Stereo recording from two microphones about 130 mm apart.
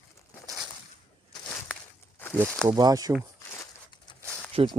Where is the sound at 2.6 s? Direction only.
25° right (ahead or behind).